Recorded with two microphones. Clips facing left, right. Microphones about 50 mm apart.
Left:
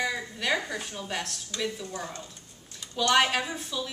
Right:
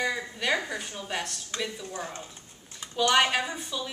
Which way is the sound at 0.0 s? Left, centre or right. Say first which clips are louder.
Right 1 dB; centre.